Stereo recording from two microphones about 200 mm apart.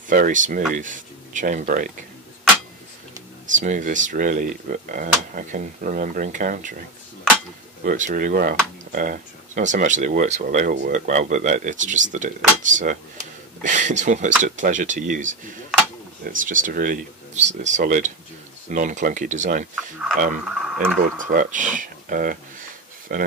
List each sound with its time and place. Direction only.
0.1 s speech: 40° right (ahead or behind)
3.5 s speech: 40° right (ahead or behind)
7.8 s speech: 40° right (ahead or behind)
19.7 s speech: centre (ahead or behind)
21.3 s a sound: 40° right (ahead or behind)